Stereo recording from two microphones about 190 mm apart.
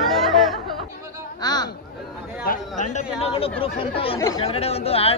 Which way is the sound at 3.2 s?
30° left (ahead or behind).